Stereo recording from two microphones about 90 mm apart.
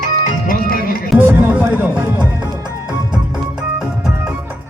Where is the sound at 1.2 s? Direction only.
20° right (ahead or behind).